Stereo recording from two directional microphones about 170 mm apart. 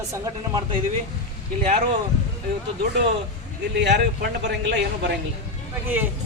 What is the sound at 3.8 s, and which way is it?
A man's voice, 90° right.